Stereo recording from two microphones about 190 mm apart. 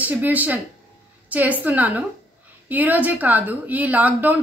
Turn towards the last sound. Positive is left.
turn(degrees=-10)  # may be behind; listen again after turning